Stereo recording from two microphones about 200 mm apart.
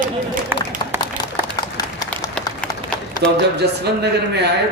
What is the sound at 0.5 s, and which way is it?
Applause, 10° right (ahead or behind).